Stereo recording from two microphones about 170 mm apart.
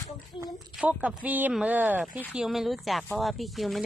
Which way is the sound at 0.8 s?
5° right (ahead or behind).